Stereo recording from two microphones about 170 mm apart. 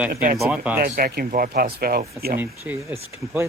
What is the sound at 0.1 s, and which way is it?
Speech, 55° right (ahead or behind).